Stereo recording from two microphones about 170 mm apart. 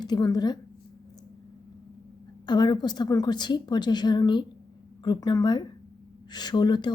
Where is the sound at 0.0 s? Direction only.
25° left (ahead or behind).